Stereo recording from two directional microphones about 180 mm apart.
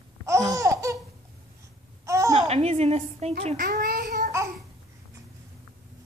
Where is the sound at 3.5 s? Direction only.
50° right (ahead or behind).